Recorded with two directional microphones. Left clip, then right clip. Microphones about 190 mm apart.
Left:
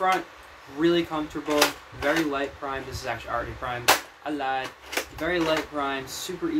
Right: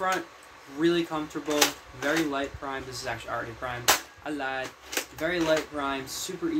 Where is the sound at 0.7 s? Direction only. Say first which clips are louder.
Left 2 dB; 10° right (ahead or behind).